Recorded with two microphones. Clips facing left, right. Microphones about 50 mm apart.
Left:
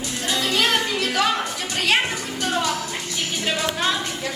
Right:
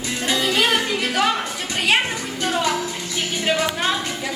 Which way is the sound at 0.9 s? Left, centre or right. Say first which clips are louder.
Right 1 dB; centre.